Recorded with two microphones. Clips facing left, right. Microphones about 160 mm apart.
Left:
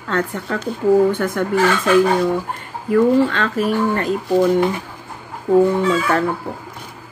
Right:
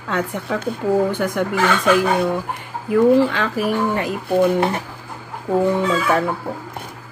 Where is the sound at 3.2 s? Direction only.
10° right (ahead or behind).